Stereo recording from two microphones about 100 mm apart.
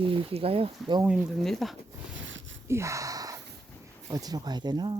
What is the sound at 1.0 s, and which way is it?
Speech, 10° right (ahead or behind).